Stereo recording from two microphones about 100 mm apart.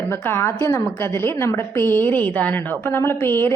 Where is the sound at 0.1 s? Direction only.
25° left (ahead or behind).